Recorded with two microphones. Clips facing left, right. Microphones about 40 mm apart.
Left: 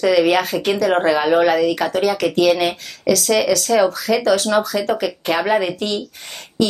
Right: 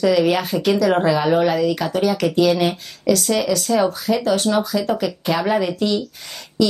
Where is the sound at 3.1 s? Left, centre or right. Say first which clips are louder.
Left 2 dB; left.